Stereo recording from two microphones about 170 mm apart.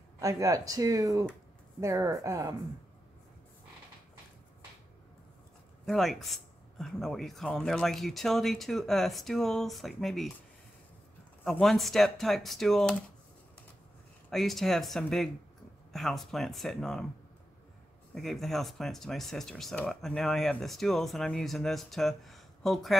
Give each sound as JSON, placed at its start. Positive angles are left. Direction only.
{"t": 0.2, "sound": "speech", "side_deg": -20}
{"t": 5.9, "sound": "speech", "side_deg": 0}
{"t": 11.4, "sound": "speech", "side_deg": 0}
{"t": 14.3, "sound": "speech", "side_deg": 0}
{"t": 18.1, "sound": "speech", "side_deg": 0}